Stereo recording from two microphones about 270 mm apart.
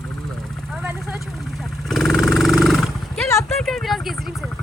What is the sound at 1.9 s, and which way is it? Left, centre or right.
Roar, centre.